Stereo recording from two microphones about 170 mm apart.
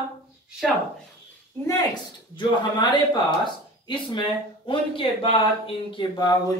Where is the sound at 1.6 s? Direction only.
25° left (ahead or behind).